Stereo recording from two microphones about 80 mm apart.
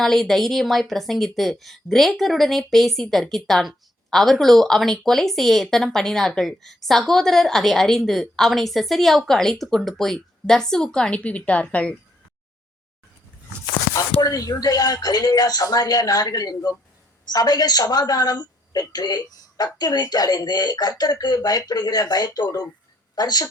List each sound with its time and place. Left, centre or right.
0.0 s a woman's voice: centre
14.2 s a woman's voice: left